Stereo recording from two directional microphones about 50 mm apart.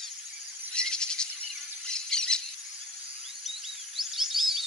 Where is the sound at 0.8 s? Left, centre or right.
Centre.